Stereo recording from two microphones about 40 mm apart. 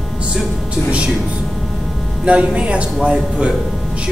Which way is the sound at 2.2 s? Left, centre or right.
Right.